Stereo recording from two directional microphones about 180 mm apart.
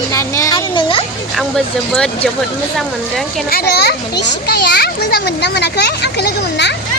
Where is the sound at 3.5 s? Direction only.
65° left (ahead or behind).